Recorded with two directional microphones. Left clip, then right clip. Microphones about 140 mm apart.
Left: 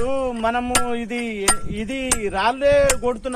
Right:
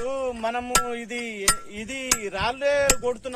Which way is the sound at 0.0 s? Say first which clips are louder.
Left 5 dB; 40° right (ahead or behind).